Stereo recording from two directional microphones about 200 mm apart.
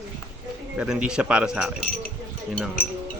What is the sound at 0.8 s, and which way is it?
Speech, 5° right (ahead or behind).